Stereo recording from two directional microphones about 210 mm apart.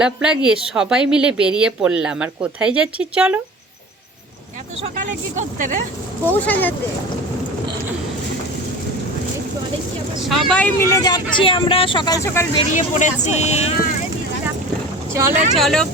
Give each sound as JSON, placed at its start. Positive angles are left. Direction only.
{"t": 0.0, "sound": "speech", "side_deg": -5}
{"t": 4.8, "sound": "speech", "side_deg": -35}
{"t": 6.2, "sound": "speech", "side_deg": 10}
{"t": 10.5, "sound": "speech", "side_deg": 10}
{"t": 12.7, "sound": "speech", "side_deg": 35}
{"t": 15.1, "sound": "speech", "side_deg": -10}
{"t": 15.5, "sound": "speech", "side_deg": 0}